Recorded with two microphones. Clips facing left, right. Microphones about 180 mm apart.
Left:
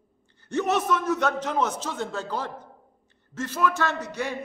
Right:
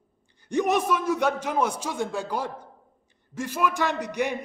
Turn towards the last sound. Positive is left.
turn(degrees=-15)  # may be behind; listen again after turning